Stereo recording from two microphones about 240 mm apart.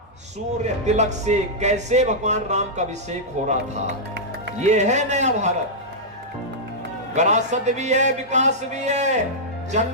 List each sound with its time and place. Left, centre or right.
0.6 s speech: right
7.2 s speech: right